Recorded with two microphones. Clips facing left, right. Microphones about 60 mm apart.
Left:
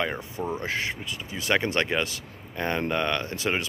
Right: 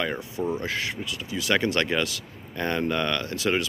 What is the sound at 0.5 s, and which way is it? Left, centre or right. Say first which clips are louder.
Speech: left 1 dB; left.